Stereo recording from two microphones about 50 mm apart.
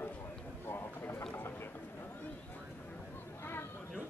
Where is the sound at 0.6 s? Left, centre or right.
Left.